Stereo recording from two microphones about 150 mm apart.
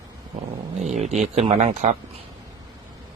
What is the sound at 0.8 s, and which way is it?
Speech, 50° right (ahead or behind).